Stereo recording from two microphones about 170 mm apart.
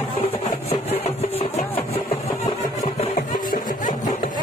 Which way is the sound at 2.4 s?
35° left (ahead or behind).